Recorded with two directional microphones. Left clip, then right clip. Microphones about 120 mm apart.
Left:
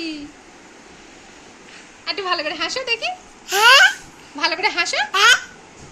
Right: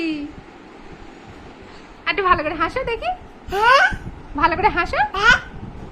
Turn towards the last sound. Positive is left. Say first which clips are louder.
# left 2 dB
turn(degrees=15)  # may be behind; listen again after turning